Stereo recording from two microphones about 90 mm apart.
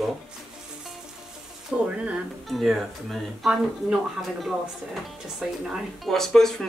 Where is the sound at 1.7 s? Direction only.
15° right (ahead or behind).